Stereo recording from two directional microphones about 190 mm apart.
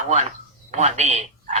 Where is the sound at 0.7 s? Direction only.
35° right (ahead or behind).